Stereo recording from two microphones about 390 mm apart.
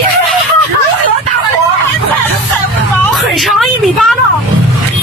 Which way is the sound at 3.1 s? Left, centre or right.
Centre.